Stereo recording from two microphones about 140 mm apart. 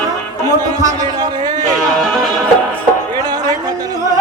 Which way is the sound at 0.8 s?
25° right (ahead or behind).